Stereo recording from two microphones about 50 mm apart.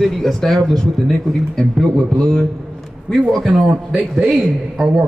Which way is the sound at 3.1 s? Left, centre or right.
Centre.